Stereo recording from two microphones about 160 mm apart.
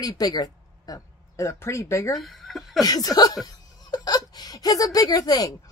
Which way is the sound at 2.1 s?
Centre (ahead or behind).